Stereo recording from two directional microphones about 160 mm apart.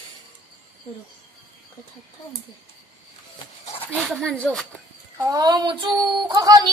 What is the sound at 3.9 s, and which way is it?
Speech, centre (ahead or behind).